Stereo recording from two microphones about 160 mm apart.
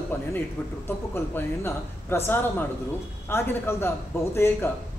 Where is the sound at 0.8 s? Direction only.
15° left (ahead or behind).